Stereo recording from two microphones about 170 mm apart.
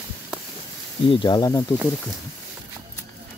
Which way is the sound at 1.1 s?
25° left (ahead or behind).